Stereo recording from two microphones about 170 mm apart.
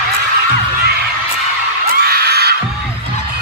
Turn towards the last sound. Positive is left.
turn(degrees=-70)  # may be behind; listen again after turning